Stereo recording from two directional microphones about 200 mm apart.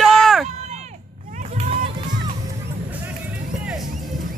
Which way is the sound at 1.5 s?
30° right (ahead or behind).